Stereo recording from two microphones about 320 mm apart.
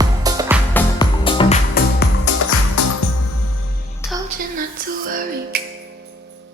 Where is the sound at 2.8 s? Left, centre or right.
Left.